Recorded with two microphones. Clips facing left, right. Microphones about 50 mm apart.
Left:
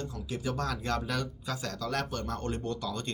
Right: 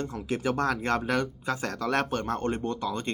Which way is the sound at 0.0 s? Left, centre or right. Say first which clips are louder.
Right 6 dB; right.